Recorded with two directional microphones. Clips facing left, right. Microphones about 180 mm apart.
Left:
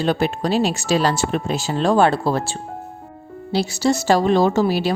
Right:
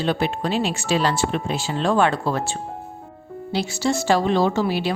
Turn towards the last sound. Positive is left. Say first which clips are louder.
# left 3 dB
turn(degrees=40)  # may be behind; listen again after turning